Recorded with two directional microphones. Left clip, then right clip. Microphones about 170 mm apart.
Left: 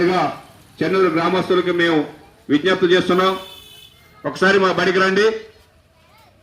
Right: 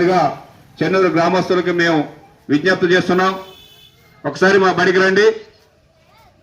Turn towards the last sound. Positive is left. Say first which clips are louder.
# right 3 dB
turn(degrees=-50)  # may be behind; listen again after turning